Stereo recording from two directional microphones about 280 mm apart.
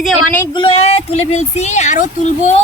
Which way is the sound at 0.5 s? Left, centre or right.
Centre.